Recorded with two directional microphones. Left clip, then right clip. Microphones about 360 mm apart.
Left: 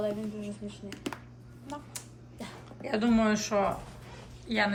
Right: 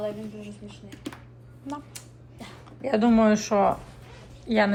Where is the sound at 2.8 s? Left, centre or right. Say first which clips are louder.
Right 7 dB; centre.